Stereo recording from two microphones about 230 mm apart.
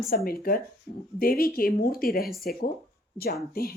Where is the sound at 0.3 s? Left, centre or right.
Left.